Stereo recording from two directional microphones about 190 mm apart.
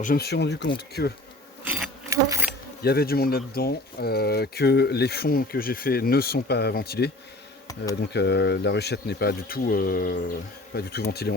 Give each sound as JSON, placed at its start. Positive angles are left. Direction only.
{"t": 0.0, "sound": "speech", "side_deg": 50}
{"t": 2.0, "sound": "insect", "side_deg": -15}
{"t": 2.8, "sound": "speech", "side_deg": 55}
{"t": 7.7, "sound": "speech", "side_deg": 20}
{"t": 8.0, "sound": "speech", "side_deg": 60}